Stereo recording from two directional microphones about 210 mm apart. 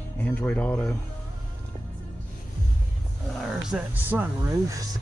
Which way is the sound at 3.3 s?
5° right (ahead or behind).